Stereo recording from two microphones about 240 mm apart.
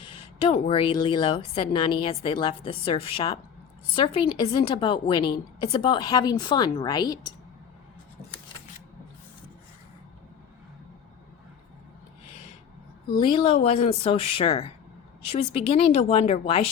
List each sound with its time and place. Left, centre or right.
0.0 s speech: left
13.1 s speech: left